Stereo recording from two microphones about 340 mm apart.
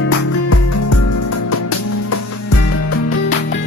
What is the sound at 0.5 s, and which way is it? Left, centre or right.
Music, left.